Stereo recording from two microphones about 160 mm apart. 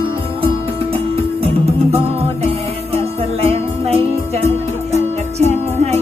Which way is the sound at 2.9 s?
40° right (ahead or behind).